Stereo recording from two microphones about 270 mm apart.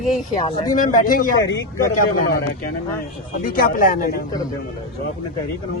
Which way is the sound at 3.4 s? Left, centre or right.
Left.